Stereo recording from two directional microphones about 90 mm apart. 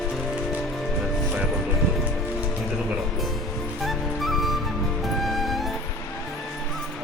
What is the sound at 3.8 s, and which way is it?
Music, centre (ahead or behind).